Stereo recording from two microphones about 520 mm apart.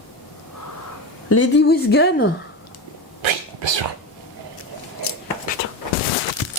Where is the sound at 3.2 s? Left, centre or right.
Right.